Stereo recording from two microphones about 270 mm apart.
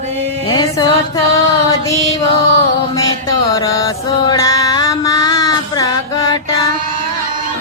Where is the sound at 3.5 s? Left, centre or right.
Centre.